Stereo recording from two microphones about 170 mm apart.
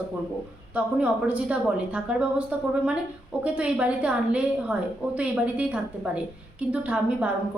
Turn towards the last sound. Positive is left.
turn(degrees=-10)  # may be behind; listen again after turning